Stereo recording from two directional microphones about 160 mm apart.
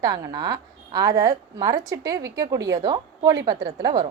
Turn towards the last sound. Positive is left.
turn(degrees=-25)  # may be behind; listen again after turning